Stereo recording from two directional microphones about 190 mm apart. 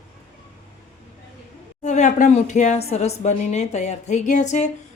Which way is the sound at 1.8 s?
40° left (ahead or behind).